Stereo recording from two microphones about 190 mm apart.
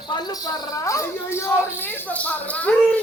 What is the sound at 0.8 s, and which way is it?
Speech, 15° left (ahead or behind).